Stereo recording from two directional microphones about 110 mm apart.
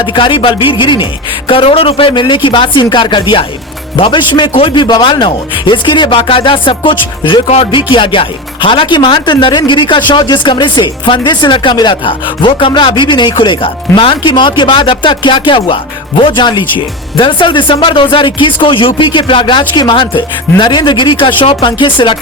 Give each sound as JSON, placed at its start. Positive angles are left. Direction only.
{"t": 0.0, "sound": "speech", "side_deg": 50}
{"t": 7.4, "sound": "speech", "side_deg": 65}